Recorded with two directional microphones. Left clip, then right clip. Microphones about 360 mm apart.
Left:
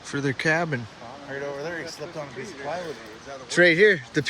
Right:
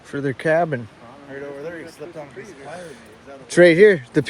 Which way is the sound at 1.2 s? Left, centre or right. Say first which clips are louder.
Even; left.